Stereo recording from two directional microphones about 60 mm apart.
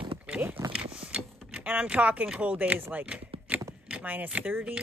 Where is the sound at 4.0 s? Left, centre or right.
Right.